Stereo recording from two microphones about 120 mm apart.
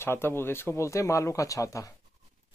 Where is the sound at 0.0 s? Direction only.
20° left (ahead or behind).